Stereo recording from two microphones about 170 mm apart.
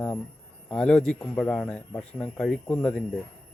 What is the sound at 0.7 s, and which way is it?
A man's voice, 5° left (ahead or behind).